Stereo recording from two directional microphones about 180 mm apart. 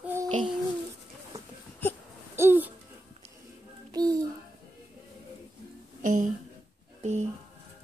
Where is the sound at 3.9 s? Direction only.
20° right (ahead or behind).